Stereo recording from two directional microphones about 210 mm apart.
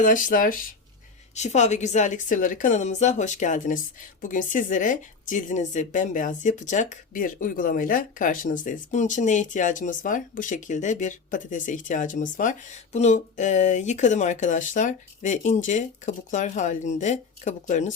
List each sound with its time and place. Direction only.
0.0 s a woman's voice: 40° left (ahead or behind)